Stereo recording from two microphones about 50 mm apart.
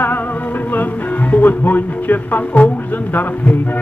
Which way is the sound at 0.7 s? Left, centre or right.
Left.